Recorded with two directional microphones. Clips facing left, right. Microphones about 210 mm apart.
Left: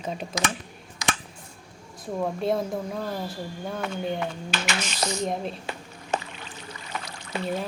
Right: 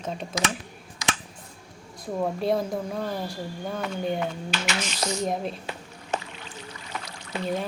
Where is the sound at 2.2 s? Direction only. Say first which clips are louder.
Right 1 dB; centre (ahead or behind).